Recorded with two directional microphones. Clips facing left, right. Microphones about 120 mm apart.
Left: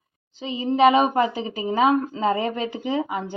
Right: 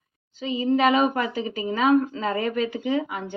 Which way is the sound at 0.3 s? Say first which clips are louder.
Left 1 dB; 30° left (ahead or behind).